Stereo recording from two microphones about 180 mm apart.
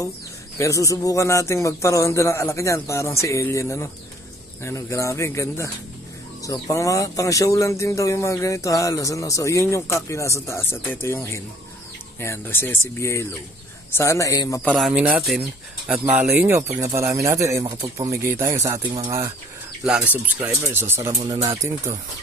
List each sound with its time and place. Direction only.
0.6 s speech: 15° left (ahead or behind)
14.7 s speech: 5° right (ahead or behind)